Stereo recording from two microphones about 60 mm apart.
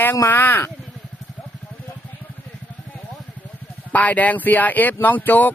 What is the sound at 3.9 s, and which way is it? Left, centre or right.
Speech, left.